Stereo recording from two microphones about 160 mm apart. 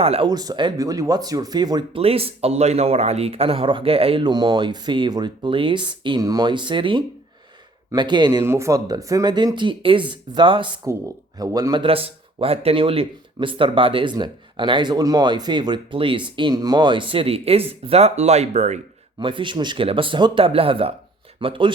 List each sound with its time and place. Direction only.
0.0 s speech: 40° right (ahead or behind)
0.3 s speech: 25° right (ahead or behind)
2.0 s speech: 35° right (ahead or behind)
10.8 s speech: 20° right (ahead or behind); by 18.8 s 45° right (ahead or behind)
19.2 s speech: 30° right (ahead or behind)